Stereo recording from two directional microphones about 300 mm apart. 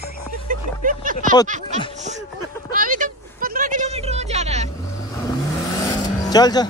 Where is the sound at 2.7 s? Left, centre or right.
Right.